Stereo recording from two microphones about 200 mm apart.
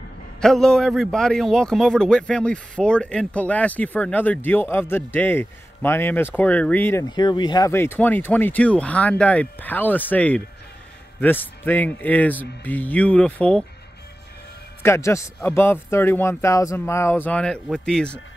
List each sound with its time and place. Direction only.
0.4 s a man's voice: 5° left (ahead or behind)
14.8 s a man's voice: 15° left (ahead or behind)